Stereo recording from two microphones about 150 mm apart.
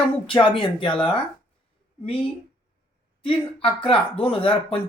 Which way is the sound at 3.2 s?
35° left (ahead or behind).